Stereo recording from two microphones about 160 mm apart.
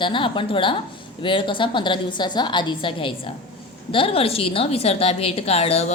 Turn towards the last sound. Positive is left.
turn(degrees=40)  # may be behind; listen again after turning